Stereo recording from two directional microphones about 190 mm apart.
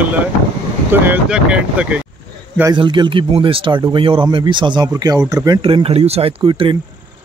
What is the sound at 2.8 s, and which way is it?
Speech, 25° right (ahead or behind).